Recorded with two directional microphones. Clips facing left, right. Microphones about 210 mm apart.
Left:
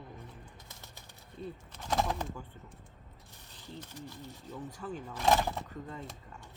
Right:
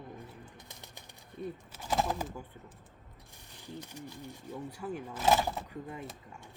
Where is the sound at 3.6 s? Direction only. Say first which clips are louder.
Right 1 dB; 15° right (ahead or behind).